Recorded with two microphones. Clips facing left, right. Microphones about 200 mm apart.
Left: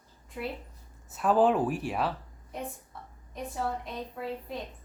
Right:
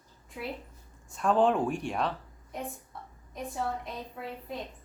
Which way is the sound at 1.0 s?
5° left (ahead or behind).